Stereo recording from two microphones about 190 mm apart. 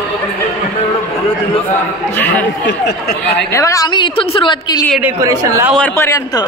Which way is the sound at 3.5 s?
15° left (ahead or behind).